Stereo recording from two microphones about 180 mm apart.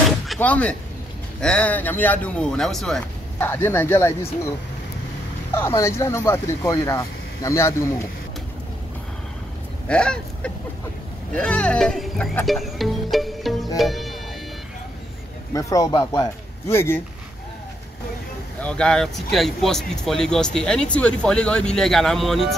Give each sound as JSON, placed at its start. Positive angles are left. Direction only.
{"t": 0.3, "sound": "speech", "side_deg": 5}
{"t": 5.5, "sound": "speech", "side_deg": 15}
{"t": 9.8, "sound": "speech", "side_deg": 5}
{"t": 15.5, "sound": "speech", "side_deg": 20}
{"t": 18.6, "sound": "speech", "side_deg": 5}